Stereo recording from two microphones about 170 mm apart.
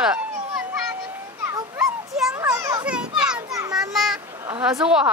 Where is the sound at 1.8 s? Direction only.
Centre (ahead or behind).